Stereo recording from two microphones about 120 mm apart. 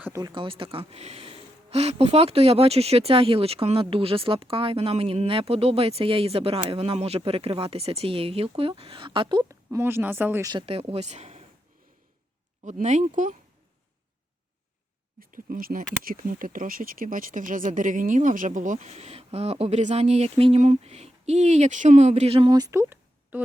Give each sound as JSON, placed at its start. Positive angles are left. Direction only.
{"t": 0.1, "sound": "speech", "side_deg": -35}
{"t": 0.4, "sound": "speech", "side_deg": -45}
{"t": 9.7, "sound": "speech", "side_deg": -20}
{"t": 10.7, "sound": "speech", "side_deg": -55}
{"t": 12.8, "sound": "speech", "side_deg": -80}
{"t": 17.1, "sound": "speech", "side_deg": -90}
{"t": 20.6, "sound": "speech", "side_deg": -75}
{"t": 22.5, "sound": "a sound", "side_deg": -30}